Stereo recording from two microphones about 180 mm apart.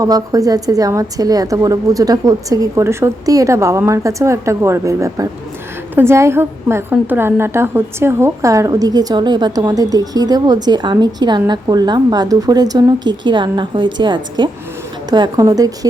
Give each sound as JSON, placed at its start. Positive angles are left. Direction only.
{"t": 0.0, "sound": "a woman's voice", "side_deg": -20}